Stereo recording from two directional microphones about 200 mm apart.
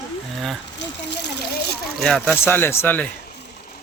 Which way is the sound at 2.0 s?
5° left (ahead or behind).